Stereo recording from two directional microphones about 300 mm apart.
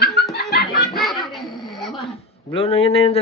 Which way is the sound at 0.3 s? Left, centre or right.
Left.